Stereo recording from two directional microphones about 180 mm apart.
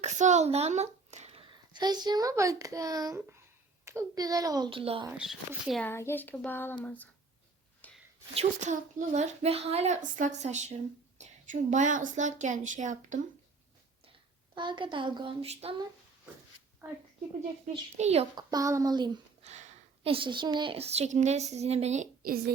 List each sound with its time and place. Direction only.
0.0 s a child's voice: 40° right (ahead or behind)
5.1 s a child's voice: centre (ahead or behind)
5.9 s child singing: 15° left (ahead or behind)
8.4 s a woman's voice: 40° right (ahead or behind)
14.5 s a child's voice: 25° right (ahead or behind)
17.9 s a woman's voice: 35° right (ahead or behind)
18.3 s a child's voice: 20° right (ahead or behind); by 22.5 s 55° right (ahead or behind)